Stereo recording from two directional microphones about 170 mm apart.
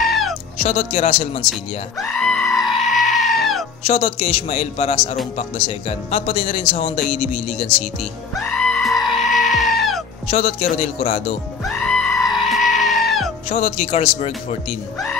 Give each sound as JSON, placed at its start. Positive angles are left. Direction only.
{"t": 0.0, "sound": "music", "side_deg": 0}
{"t": 0.7, "sound": "speech", "side_deg": 40}
{"t": 1.5, "sound": "goat", "side_deg": 0}
{"t": 3.8, "sound": "speech", "side_deg": 35}
{"t": 8.4, "sound": "goat", "side_deg": 5}
{"t": 10.3, "sound": "speech", "side_deg": 40}
{"t": 11.6, "sound": "goat", "side_deg": 5}
{"t": 13.5, "sound": "speech", "side_deg": 45}